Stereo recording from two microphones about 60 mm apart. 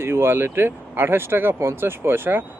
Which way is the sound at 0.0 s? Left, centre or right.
Right.